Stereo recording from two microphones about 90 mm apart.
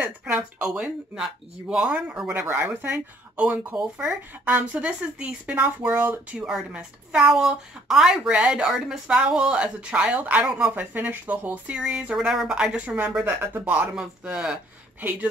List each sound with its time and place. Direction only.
0.0 s speech: 10° right (ahead or behind)
2.4 s speech: 20° right (ahead or behind)
6.3 s speech: 10° right (ahead or behind)
13.9 s speech: 10° right (ahead or behind)
15.0 s speech: 20° right (ahead or behind)